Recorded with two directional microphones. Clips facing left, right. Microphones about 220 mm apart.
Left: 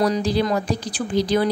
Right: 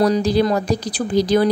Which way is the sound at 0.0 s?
40° right (ahead or behind).